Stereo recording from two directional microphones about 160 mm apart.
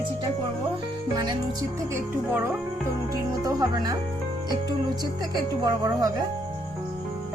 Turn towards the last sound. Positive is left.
turn(degrees=-25)  # may be behind; listen again after turning